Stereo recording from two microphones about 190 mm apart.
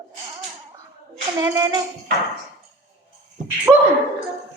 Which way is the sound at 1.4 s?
20° right (ahead or behind).